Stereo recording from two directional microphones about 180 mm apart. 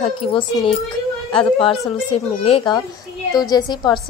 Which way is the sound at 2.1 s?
30° left (ahead or behind).